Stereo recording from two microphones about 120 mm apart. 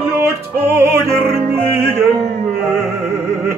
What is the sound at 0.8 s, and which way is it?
Music, 20° right (ahead or behind).